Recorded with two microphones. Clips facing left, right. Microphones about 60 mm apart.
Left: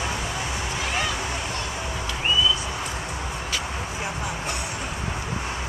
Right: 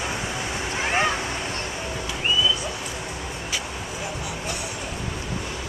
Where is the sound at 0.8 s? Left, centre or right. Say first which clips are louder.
Right 5 dB; right.